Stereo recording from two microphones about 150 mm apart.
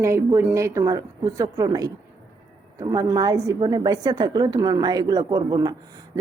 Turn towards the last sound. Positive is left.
turn(degrees=-25)  # may be behind; listen again after turning